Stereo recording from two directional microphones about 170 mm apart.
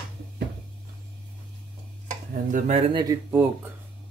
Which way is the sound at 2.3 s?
45° right (ahead or behind).